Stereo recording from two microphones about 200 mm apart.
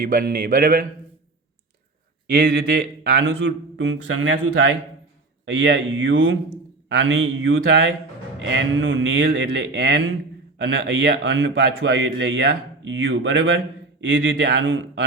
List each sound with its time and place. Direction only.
0.0 s speech: 45° right (ahead or behind)
2.2 s a man's voice: 55° right (ahead or behind)